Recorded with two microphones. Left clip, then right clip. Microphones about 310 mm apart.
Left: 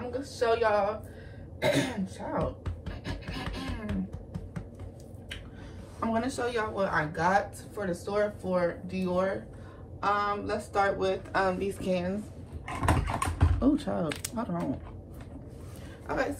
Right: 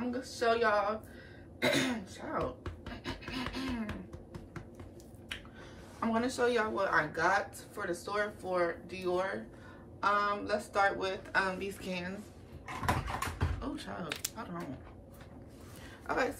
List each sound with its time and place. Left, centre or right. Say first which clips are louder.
0.1 s a woman's voice: left 4 dB; centre
1.6 s scratch: left 3 dB; centre
5.9 s a woman's voice: left 2 dB; centre
12.6 s a sound: left 4 dB; left
13.6 s speech: left 13 dB; centre